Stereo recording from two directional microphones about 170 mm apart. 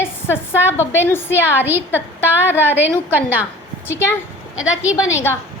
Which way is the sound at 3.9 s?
15° left (ahead or behind).